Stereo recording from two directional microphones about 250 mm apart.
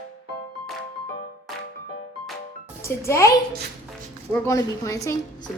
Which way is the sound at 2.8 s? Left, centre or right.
Centre.